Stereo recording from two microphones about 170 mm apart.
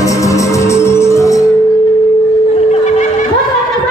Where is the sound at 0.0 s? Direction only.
20° left (ahead or behind).